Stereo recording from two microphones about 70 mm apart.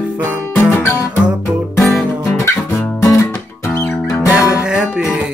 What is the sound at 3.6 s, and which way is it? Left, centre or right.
Music, left.